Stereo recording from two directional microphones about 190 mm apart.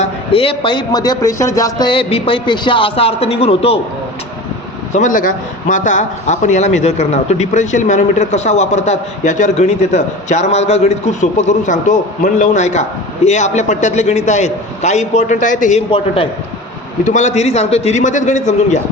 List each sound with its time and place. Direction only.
0.0 s a man's voice: 30° left (ahead or behind)
4.9 s a man's voice: 40° left (ahead or behind)
15.9 s a man's voice: 30° left (ahead or behind)
17.0 s a man's voice: 40° left (ahead or behind)